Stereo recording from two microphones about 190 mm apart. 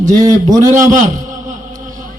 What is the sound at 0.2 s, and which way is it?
Speech, 15° right (ahead or behind).